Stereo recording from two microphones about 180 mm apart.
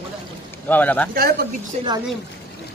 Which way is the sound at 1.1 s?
55° right (ahead or behind).